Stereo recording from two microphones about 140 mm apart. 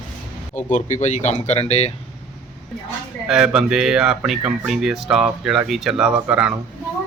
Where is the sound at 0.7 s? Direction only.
60° left (ahead or behind).